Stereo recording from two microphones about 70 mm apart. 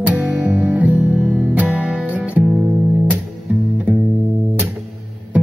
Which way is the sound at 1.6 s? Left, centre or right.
Centre.